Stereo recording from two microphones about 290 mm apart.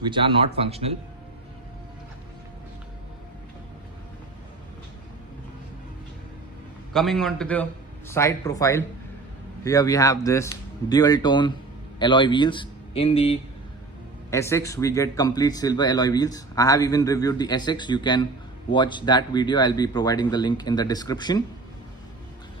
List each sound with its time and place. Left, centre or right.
0.0 s speech: centre
6.9 s a man's voice: centre
14.3 s speech: centre